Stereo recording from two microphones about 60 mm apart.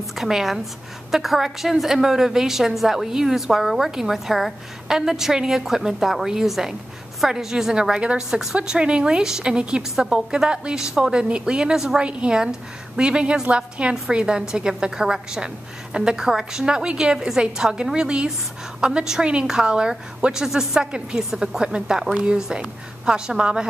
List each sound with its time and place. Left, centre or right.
0.2 s a woman's voice: centre